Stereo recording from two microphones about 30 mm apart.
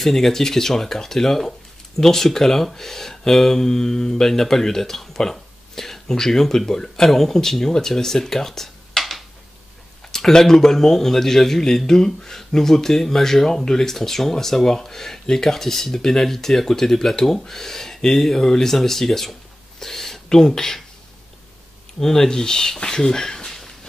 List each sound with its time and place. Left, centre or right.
0.0 s speech: centre
10.1 s speech: centre
22.0 s speech: centre
23.4 s a sound: centre